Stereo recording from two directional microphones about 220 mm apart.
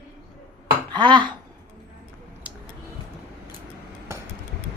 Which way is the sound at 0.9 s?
20° right (ahead or behind).